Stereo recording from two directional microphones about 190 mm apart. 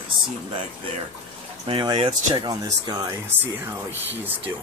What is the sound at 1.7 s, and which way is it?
Speech, 25° right (ahead or behind).